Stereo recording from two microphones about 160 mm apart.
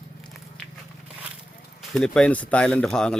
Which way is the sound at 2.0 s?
5° left (ahead or behind).